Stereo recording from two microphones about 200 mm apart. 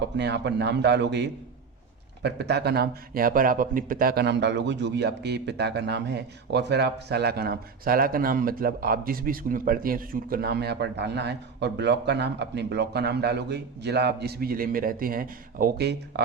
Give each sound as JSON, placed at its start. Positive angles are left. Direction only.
{"t": 0.2, "sound": "a man's voice", "side_deg": -60}